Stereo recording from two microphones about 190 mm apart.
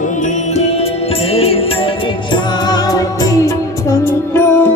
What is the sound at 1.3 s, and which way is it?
Music, 30° left (ahead or behind).